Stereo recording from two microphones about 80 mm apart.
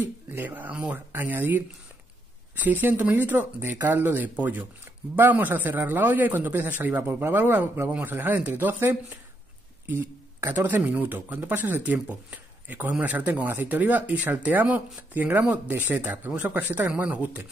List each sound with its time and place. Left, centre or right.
0.0 s speech: right
2.6 s speech: right